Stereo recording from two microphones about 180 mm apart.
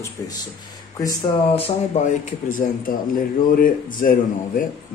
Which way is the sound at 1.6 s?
35° left (ahead or behind).